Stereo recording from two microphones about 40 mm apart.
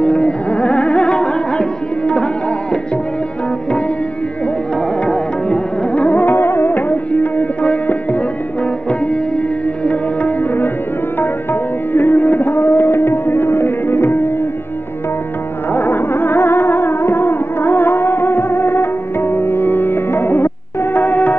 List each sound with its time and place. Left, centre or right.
0.0 s music: left
5.0 s music: left
6.3 s music: left
6.7 s music: left
9.8 s tabla: left
11.9 s music: left
12.6 s tabla: left
12.9 s tabla: left
15.7 s music: left
20.9 s music: left